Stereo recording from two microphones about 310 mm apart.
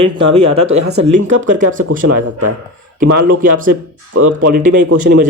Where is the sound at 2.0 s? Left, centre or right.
Right.